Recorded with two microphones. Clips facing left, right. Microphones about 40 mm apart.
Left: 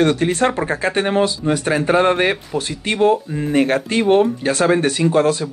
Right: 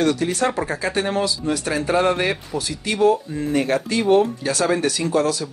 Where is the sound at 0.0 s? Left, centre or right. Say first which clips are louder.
Left 4 dB; left.